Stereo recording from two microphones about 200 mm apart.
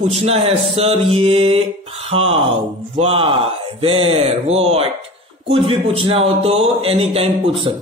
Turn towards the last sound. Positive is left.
turn(degrees=-30)  # may be behind; listen again after turning